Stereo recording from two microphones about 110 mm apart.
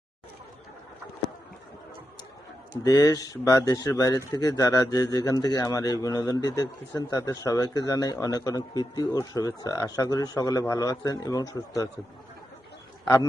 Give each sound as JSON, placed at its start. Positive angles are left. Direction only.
{"t": 2.8, "sound": "speech", "side_deg": 35}